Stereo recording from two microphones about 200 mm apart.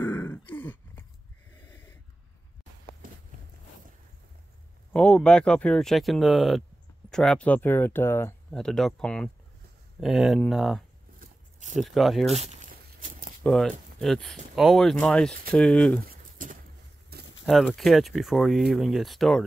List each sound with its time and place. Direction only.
0.0 s grunt: 10° left (ahead or behind)
1.6 s snort: 10° left (ahead or behind)
4.9 s speech: 5° left (ahead or behind)
12.4 s a sound: 35° right (ahead or behind)
13.4 s speech: 5° left (ahead or behind)
16.1 s a sound: 45° right (ahead or behind)
17.5 s speech: centre (ahead or behind)